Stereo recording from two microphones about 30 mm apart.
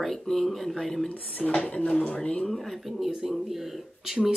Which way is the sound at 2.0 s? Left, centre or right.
Left.